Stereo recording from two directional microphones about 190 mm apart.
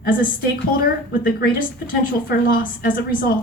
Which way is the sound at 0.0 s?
45° left (ahead or behind).